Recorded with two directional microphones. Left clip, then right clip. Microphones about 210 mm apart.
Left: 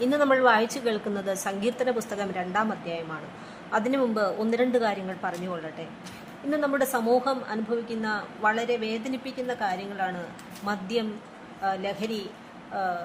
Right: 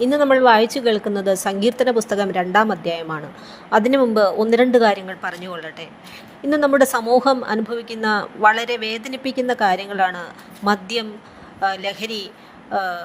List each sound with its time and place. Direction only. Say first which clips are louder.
0.0 s a woman's voice: right 7 dB; 25° right (ahead or behind)